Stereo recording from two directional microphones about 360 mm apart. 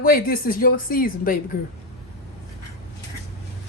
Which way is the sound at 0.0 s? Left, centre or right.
Left.